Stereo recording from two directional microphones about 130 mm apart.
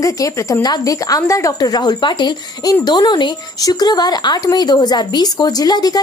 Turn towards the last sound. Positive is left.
turn(degrees=30)  # may be behind; listen again after turning